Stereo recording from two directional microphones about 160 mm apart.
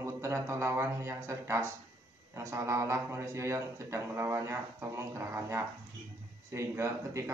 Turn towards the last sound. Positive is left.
turn(degrees=-20)  # may be behind; listen again after turning